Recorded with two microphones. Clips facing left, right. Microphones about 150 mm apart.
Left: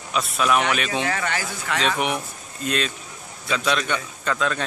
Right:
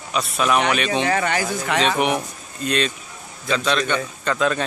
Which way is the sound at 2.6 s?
5° left (ahead or behind).